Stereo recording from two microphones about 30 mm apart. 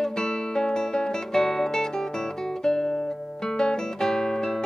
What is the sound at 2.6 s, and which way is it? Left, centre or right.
Music, left.